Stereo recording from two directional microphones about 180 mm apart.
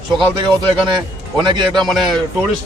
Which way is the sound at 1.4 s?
25° right (ahead or behind).